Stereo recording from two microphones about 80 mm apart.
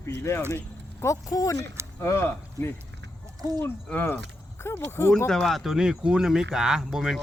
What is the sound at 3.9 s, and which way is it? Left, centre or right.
Speech, left.